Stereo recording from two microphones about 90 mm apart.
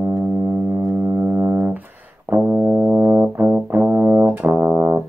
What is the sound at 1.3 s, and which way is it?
Music, 25° right (ahead or behind).